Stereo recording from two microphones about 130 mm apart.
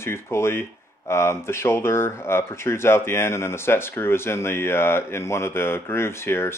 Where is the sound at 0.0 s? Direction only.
20° left (ahead or behind).